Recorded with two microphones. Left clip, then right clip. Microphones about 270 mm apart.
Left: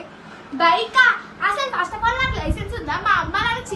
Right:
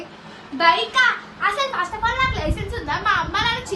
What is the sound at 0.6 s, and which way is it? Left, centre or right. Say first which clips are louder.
A child's voice: left 1 dB; centre.